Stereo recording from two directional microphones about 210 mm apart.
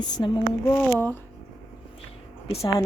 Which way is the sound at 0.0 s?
20° left (ahead or behind).